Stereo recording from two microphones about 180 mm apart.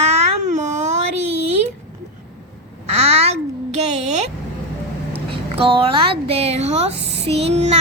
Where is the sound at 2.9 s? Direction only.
35° right (ahead or behind).